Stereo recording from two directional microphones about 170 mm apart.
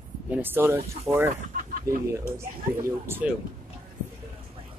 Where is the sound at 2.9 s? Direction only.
15° right (ahead or behind).